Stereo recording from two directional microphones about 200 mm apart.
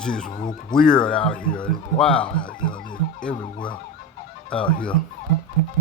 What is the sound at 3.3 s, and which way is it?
Speech, 25° left (ahead or behind).